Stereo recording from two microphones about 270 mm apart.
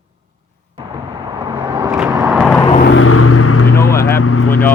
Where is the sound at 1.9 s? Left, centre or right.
Centre.